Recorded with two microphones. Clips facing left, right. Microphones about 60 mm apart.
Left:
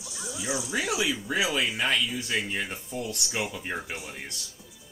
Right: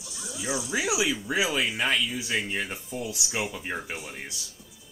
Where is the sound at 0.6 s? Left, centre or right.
Centre.